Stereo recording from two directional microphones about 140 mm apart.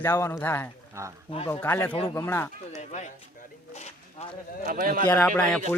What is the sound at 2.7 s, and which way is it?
Speech, 55° left (ahead or behind).